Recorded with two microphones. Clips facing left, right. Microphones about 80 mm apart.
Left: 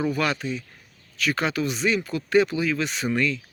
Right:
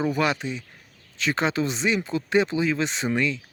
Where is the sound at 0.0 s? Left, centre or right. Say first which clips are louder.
Right 1 dB; right.